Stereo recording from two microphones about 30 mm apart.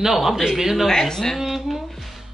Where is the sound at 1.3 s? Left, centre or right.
Centre.